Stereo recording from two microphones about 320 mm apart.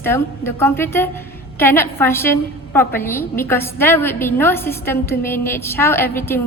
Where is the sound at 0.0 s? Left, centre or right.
Centre.